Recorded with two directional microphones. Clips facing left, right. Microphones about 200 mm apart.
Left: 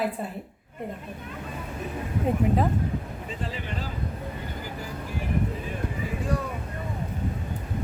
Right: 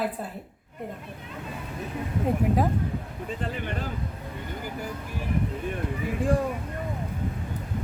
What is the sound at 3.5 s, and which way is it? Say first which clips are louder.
Speech: right 2 dB; 55° right (ahead or behind).